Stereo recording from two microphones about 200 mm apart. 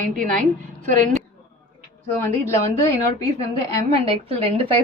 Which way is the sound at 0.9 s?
40° right (ahead or behind).